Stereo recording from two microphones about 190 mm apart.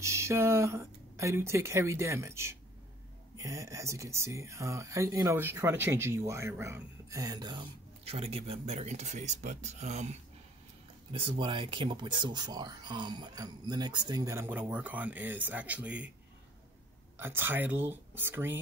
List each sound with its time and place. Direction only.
0.0 s speech: 15° right (ahead or behind); by 10.0 s 35° right (ahead or behind)
11.1 s speech: 25° right (ahead or behind); by 16.1 s 5° right (ahead or behind)
17.2 s speech: 10° right (ahead or behind)